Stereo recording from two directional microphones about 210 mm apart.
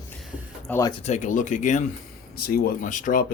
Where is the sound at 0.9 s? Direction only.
35° left (ahead or behind).